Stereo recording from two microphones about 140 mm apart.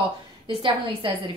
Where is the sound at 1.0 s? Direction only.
40° right (ahead or behind).